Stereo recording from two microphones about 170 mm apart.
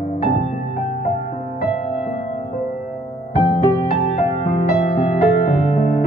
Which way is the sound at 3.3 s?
40° left (ahead or behind).